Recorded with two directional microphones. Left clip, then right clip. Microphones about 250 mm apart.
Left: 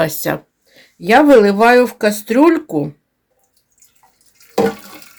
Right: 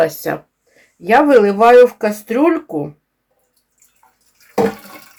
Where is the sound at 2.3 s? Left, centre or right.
Left.